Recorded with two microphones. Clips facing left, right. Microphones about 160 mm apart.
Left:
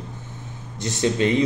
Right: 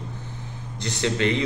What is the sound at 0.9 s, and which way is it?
Speech, 20° left (ahead or behind).